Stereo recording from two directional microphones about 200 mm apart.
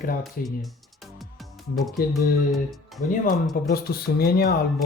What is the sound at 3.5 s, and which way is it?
Speech, 50° left (ahead or behind).